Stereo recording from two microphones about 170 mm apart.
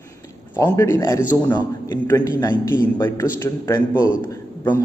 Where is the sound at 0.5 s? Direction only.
15° left (ahead or behind).